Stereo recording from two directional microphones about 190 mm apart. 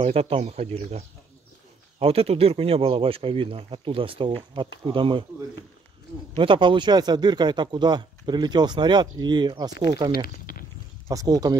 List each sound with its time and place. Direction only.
0.0 s speech: 30° right (ahead or behind)
6.3 s speech: 25° right (ahead or behind)
10.1 s speech: 50° left (ahead or behind)
11.1 s speech: 20° right (ahead or behind)